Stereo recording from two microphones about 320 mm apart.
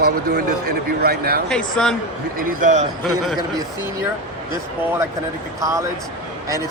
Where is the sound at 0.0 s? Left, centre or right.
Right.